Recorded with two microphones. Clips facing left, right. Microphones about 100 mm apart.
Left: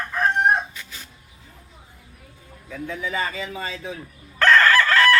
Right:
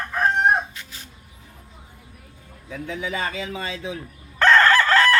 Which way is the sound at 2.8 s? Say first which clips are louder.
Left 1 dB; 75° right (ahead or behind).